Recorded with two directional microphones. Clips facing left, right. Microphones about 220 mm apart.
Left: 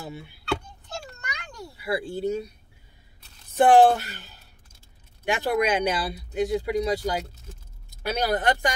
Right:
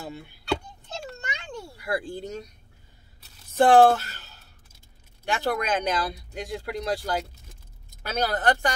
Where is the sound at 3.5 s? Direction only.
15° left (ahead or behind).